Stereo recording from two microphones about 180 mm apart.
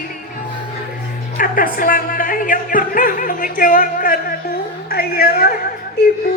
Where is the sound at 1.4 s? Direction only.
50° left (ahead or behind).